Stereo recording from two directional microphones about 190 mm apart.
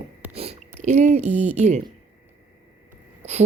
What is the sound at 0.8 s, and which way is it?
Speech, 35° right (ahead or behind).